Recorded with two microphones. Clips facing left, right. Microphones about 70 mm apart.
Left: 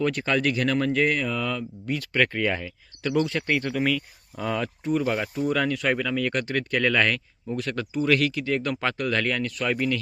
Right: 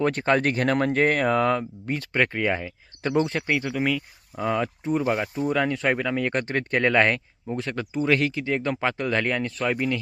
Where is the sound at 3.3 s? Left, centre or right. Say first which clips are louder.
Even; centre.